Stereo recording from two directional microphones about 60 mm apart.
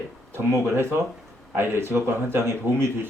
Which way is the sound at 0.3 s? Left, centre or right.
Right.